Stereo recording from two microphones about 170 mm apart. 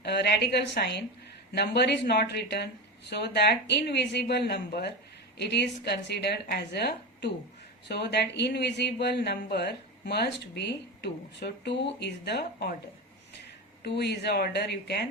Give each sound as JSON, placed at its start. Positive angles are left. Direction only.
{"t": 0.0, "sound": "speech", "side_deg": 75}
{"t": 13.8, "sound": "speech", "side_deg": 80}